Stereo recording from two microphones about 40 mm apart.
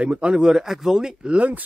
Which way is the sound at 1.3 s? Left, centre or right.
Right.